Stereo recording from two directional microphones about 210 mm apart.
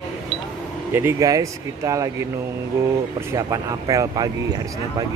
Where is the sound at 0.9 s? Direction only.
15° right (ahead or behind).